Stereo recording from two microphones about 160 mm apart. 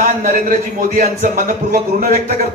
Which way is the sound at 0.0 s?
60° right (ahead or behind).